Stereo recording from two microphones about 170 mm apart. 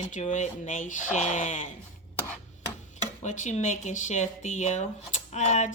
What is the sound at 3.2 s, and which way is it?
Speech, 45° left (ahead or behind).